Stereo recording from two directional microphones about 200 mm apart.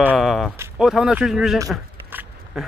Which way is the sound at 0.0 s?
5° right (ahead or behind).